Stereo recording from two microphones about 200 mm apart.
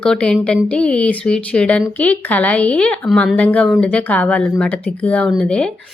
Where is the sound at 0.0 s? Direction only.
5° left (ahead or behind).